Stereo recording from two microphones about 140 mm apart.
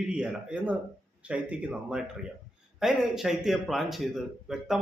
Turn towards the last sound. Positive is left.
turn(degrees=-5)  # may be behind; listen again after turning